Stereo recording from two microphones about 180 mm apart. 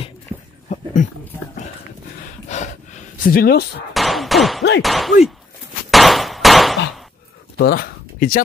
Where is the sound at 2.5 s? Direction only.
40° left (ahead or behind); by 3.6 s 55° left (ahead or behind).